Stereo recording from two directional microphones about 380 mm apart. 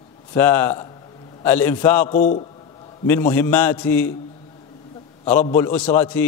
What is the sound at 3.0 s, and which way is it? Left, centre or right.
A man's voice, centre.